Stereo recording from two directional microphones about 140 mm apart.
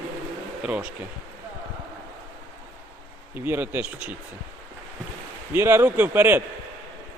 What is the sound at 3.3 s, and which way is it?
Speech, 15° right (ahead or behind).